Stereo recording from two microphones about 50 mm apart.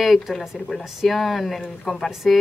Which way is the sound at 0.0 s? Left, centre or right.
Centre.